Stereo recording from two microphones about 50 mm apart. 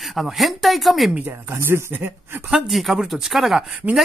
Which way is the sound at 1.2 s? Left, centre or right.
Right.